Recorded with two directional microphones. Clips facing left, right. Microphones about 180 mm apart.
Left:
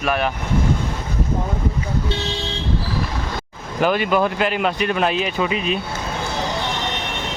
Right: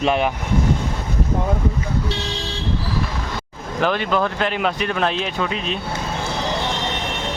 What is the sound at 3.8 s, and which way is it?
Speech, 5° left (ahead or behind).